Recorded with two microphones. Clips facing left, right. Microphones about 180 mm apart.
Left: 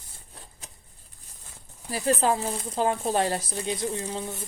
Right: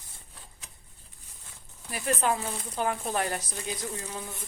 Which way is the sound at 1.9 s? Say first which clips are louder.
Left 4 dB; 35° left (ahead or behind).